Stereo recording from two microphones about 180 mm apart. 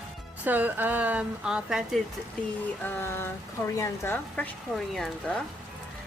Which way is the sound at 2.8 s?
15° left (ahead or behind).